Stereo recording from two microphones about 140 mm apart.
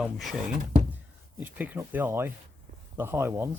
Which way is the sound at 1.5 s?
10° right (ahead or behind).